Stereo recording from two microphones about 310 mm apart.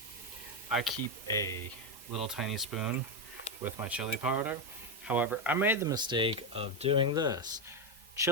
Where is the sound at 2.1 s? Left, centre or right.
Centre.